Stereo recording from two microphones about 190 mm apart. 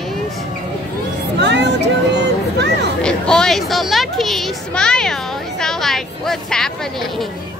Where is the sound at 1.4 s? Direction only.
65° right (ahead or behind).